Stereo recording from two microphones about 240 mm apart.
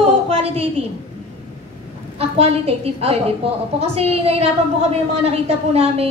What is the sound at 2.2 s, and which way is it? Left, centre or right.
A woman's voice, right.